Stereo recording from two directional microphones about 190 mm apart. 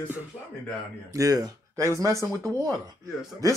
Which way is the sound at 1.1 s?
20° right (ahead or behind).